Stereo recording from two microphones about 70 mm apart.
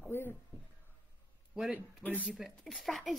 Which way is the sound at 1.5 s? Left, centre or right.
Centre.